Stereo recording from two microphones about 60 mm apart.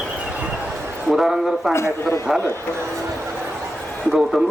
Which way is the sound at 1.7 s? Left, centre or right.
Left.